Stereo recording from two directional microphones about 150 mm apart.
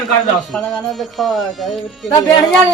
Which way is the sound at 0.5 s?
5° left (ahead or behind).